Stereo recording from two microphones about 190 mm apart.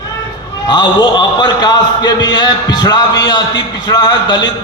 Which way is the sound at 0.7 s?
25° left (ahead or behind).